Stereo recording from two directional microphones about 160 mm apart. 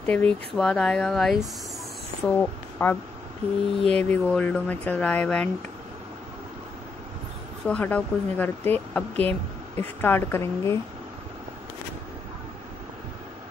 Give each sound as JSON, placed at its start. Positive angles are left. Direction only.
{"t": 0.0, "sound": "speech", "side_deg": 10}
{"t": 4.0, "sound": "speech", "side_deg": 10}
{"t": 7.6, "sound": "speech", "side_deg": 10}